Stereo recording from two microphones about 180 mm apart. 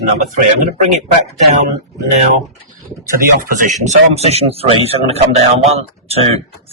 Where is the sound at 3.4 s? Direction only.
45° right (ahead or behind).